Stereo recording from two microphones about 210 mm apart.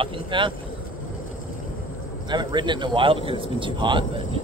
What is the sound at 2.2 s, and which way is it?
Speech, 20° right (ahead or behind).